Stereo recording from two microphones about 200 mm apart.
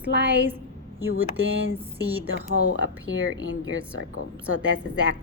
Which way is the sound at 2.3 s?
70° right (ahead or behind).